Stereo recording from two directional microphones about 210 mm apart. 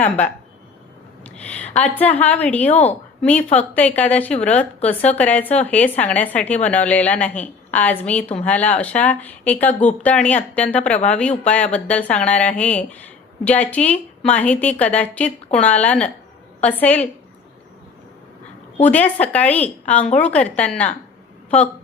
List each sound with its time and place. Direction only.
1.2 s a woman's voice: 5° left (ahead or behind)
2.6 s a woman's voice: 30° left (ahead or behind)
3.2 s speech: 5° left (ahead or behind)
18.8 s a woman's voice: 5° left (ahead or behind)